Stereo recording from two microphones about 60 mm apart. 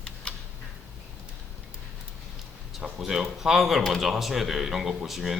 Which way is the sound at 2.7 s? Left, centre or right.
Centre.